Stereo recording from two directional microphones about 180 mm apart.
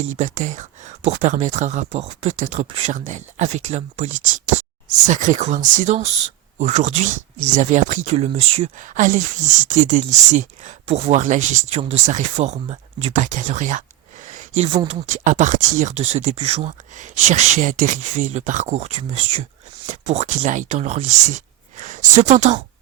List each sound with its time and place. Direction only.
0.0 s speech: 45° right (ahead or behind)
13.1 s speech: 45° right (ahead or behind)
14.3 s a sound: 45° right (ahead or behind)
14.8 s speech: 30° right (ahead or behind)
15.2 s speech: 45° right (ahead or behind)